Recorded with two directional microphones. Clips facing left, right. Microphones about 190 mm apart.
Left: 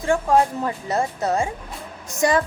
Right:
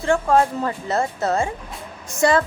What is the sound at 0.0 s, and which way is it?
Speech, 15° left (ahead or behind).